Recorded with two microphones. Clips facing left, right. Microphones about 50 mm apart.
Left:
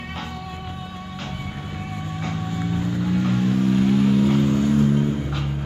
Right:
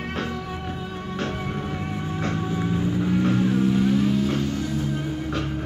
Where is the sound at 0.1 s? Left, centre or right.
Right.